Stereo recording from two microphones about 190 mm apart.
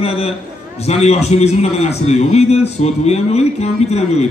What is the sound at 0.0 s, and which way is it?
A man's voice, 30° left (ahead or behind).